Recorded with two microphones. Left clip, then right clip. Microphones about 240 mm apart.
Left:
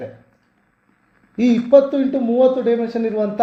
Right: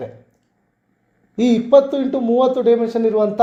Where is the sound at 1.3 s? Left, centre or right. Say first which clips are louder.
Even; right.